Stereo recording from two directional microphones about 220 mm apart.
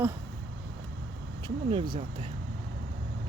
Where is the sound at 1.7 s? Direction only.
20° right (ahead or behind).